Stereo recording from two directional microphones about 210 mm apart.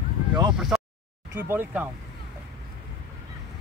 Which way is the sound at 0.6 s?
Centre (ahead or behind).